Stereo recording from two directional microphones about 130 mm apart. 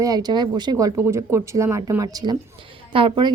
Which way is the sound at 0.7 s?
25° right (ahead or behind).